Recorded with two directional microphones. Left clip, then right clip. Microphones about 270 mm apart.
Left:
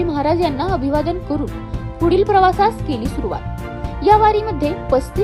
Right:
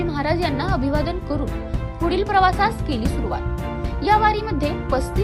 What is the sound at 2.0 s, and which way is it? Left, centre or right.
Speech, centre.